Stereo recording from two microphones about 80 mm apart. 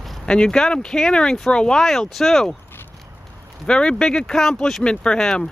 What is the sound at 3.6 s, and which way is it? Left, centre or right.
Speech, centre.